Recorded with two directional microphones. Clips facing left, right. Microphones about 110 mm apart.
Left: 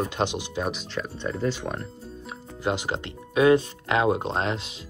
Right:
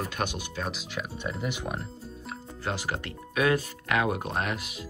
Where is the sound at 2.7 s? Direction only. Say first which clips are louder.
Left 5 dB; 20° left (ahead or behind).